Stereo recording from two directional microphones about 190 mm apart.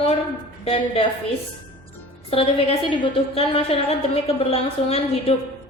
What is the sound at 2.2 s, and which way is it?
A woman's voice, 30° left (ahead or behind).